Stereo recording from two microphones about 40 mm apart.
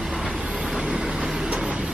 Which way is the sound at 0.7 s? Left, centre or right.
Centre.